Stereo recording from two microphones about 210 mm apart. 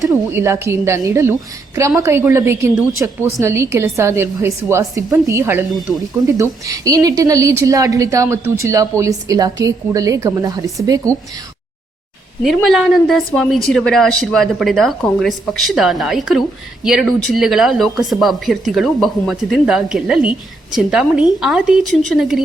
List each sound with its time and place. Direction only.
0.0 s a woman's voice: 10° right (ahead or behind)
12.4 s speech: centre (ahead or behind)